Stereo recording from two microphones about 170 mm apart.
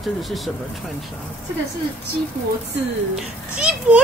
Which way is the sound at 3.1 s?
5° right (ahead or behind).